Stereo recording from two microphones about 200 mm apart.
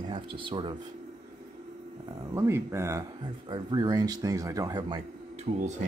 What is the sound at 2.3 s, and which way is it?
Speech, 15° right (ahead or behind).